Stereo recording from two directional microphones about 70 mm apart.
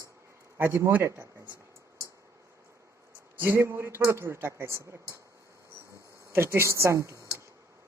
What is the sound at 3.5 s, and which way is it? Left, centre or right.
Speech, right.